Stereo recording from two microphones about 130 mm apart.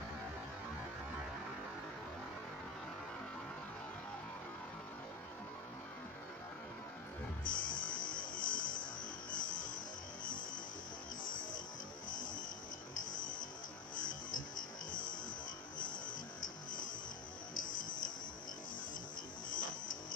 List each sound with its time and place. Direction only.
7.4 s music: 90° left
10.2 s music: 90° left
12.1 s music: 90° left
15.8 s a sound: 90° left
17.6 s music: 90° left
19.5 s music: 90° left